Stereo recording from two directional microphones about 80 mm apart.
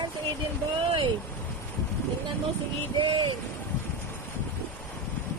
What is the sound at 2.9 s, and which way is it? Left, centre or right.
Speech, right.